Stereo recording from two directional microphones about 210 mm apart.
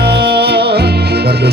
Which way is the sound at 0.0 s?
50° right (ahead or behind).